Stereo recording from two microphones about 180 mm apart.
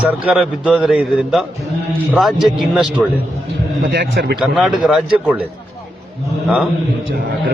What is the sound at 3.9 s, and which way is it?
Speech, 65° right (ahead or behind).